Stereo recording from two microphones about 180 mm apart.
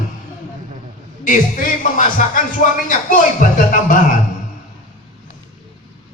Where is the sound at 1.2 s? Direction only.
45° left (ahead or behind).